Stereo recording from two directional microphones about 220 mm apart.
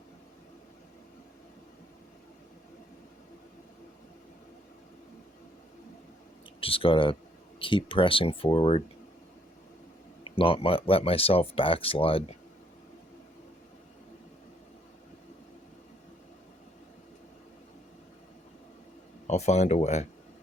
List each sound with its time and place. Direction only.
6.6 s speech: 25° left (ahead or behind)
10.2 s speech: 25° left (ahead or behind)
19.3 s speech: 30° left (ahead or behind)